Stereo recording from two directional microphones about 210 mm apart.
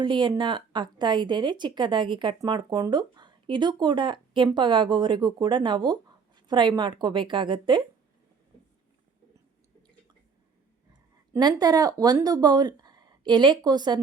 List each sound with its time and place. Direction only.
0.0 s speech: 20° right (ahead or behind)
11.3 s speech: 20° right (ahead or behind)